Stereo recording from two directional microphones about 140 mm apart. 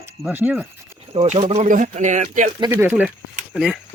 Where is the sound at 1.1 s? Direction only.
45° right (ahead or behind); by 2.5 s 60° right (ahead or behind).